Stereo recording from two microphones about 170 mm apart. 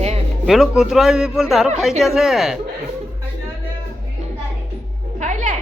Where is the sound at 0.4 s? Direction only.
Centre (ahead or behind).